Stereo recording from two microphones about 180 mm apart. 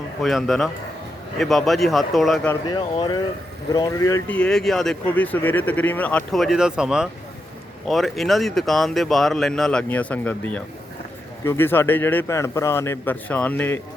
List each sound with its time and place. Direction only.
0.2 s speech: centre (ahead or behind)
2.6 s speech: 25° left (ahead or behind)
4.4 s a man's voice: 5° left (ahead or behind)